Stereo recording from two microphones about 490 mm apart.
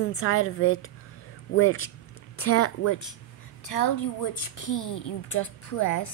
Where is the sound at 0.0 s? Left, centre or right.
Left.